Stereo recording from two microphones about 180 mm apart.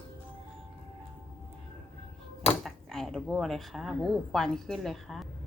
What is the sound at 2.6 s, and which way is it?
Speech, 5° left (ahead or behind).